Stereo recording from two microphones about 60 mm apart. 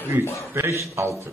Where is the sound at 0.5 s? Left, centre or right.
Right.